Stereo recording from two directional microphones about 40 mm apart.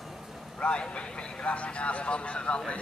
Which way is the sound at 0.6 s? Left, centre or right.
Left.